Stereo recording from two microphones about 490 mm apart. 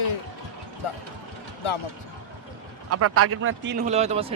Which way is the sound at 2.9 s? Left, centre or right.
Right.